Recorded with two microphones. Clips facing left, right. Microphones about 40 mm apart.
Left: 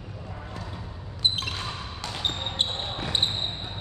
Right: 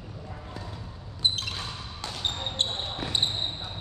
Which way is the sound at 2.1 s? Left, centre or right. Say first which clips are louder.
Left 1 dB; centre.